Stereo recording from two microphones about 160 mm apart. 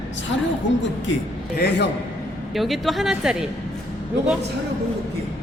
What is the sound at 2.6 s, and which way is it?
Speech, centre (ahead or behind).